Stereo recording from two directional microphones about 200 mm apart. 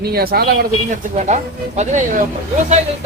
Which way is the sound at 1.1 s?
35° right (ahead or behind).